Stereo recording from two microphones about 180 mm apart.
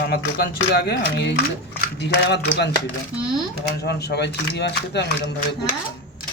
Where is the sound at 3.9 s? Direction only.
65° left (ahead or behind).